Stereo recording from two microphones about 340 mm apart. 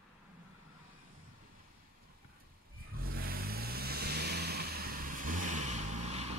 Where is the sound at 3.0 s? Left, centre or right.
Right.